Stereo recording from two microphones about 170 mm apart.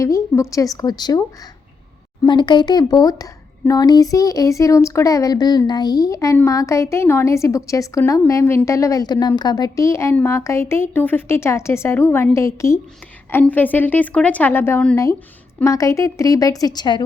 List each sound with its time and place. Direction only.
0.0 s a woman's voice: 20° left (ahead or behind)
2.2 s a woman's voice: 25° left (ahead or behind)